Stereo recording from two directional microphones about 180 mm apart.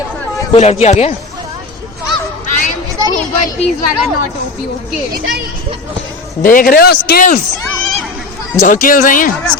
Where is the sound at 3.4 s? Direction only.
45° left (ahead or behind).